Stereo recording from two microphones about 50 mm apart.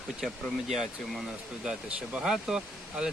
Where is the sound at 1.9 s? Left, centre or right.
Right.